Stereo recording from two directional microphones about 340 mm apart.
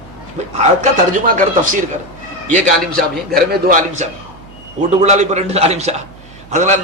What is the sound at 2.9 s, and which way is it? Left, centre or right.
A man's voice, right.